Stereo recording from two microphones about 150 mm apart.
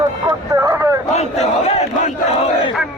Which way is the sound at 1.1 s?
45° left (ahead or behind).